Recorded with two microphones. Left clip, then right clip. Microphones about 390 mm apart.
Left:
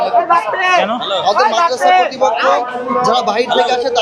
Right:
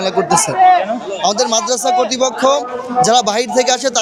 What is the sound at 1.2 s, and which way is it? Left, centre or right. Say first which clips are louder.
A man's voice: left 3 dB; right.